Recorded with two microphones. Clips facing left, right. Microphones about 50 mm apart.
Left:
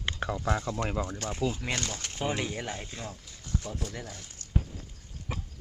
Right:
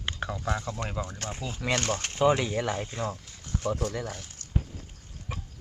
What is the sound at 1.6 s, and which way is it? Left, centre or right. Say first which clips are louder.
Speech: right 6 dB; right.